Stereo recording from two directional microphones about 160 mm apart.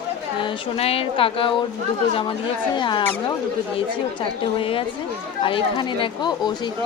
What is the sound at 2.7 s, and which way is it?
Speech, 30° left (ahead or behind).